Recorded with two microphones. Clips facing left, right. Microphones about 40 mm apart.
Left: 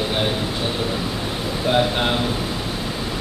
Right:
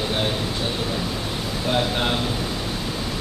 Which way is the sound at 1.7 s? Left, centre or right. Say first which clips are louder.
Left 3 dB; centre.